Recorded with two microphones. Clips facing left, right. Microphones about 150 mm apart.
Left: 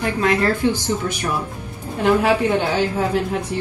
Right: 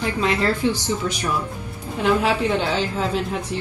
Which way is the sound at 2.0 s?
15° left (ahead or behind).